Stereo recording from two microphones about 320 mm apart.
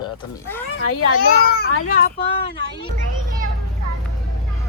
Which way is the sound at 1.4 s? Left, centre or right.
Left.